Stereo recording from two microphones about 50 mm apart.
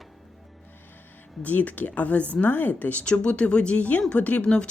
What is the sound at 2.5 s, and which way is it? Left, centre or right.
Speech, left.